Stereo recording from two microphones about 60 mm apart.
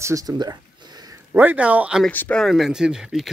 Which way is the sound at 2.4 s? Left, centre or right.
Centre.